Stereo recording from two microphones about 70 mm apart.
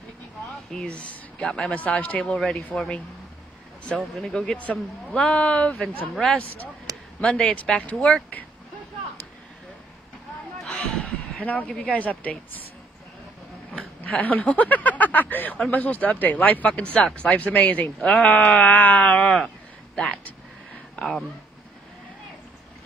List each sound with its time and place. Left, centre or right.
0.7 s speech: centre
4.6 s speech: left
7.2 s speech: centre
10.6 s a sound: centre
11.7 s speech: centre
14.0 s speech: left